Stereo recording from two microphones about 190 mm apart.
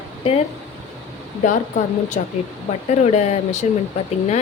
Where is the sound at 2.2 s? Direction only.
35° left (ahead or behind).